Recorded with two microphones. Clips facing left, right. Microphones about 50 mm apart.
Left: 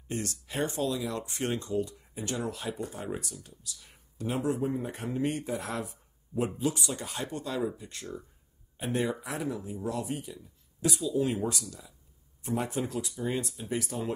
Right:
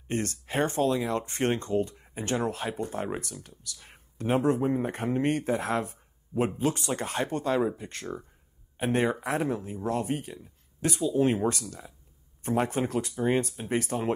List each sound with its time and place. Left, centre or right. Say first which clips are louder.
0.1 s speech: right 5 dB; right